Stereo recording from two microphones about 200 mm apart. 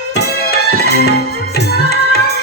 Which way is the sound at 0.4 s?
50° left (ahead or behind).